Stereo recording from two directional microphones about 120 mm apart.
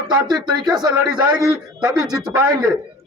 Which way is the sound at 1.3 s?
30° right (ahead or behind).